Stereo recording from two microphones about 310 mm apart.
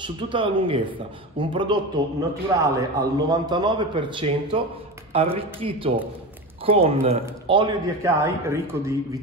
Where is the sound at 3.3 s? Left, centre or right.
Centre.